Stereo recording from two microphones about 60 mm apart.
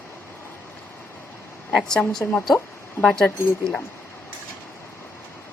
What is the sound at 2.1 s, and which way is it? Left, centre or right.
Speech, centre.